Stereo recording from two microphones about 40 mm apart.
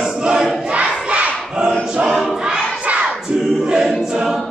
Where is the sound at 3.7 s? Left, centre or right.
Centre.